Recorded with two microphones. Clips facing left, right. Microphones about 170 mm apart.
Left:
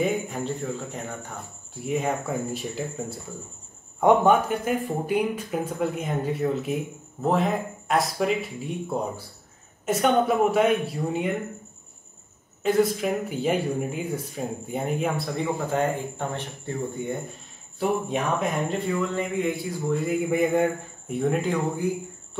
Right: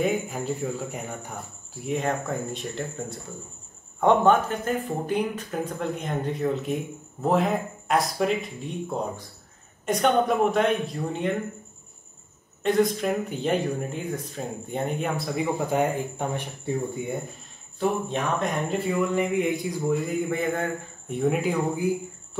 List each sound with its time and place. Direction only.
0.0 s speech: centre (ahead or behind)
1.9 s speech: 5° left (ahead or behind)
12.6 s speech: 5° left (ahead or behind)
15.3 s speech: 15° right (ahead or behind)
17.7 s speech: 10° left (ahead or behind)
18.7 s speech: 10° right (ahead or behind)
20.2 s speech: 10° left (ahead or behind)
21.1 s speech: 5° right (ahead or behind)